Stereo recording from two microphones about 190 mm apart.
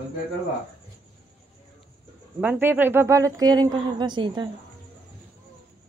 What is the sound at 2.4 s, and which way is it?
Speech, 10° right (ahead or behind).